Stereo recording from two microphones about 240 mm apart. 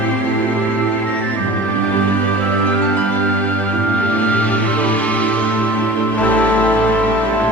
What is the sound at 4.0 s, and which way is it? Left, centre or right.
Music, centre.